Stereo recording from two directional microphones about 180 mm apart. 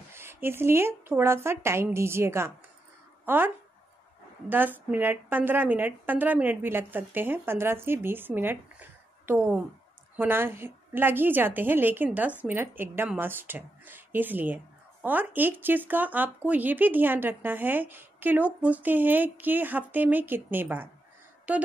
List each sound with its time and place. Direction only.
0.1 s a woman's voice: 15° right (ahead or behind)